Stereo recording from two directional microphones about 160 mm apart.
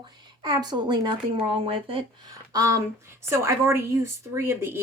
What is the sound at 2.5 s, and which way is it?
Speech, 20° right (ahead or behind).